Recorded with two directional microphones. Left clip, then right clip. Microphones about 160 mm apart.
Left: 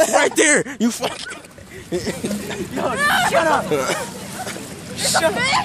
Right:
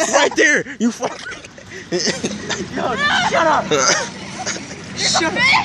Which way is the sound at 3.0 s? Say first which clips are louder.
Even; 35° left (ahead or behind).